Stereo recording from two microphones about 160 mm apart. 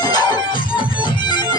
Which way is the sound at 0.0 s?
25° left (ahead or behind).